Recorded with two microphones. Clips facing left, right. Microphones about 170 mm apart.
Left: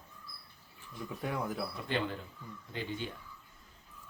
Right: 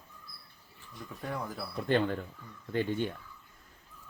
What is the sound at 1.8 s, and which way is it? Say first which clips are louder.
Speech: right 9 dB; 50° right (ahead or behind).